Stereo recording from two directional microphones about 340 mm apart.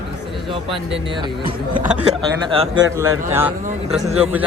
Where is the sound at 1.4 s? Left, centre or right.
Centre.